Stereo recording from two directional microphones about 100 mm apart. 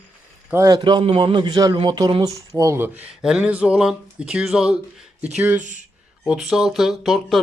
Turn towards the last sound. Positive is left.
turn(degrees=0)  # may be behind; listen again after turning